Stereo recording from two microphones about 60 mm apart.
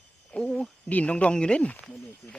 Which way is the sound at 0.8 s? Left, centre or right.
Left.